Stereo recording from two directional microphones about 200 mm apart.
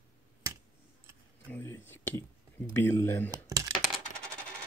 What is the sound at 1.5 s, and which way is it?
Speech, 10° left (ahead or behind).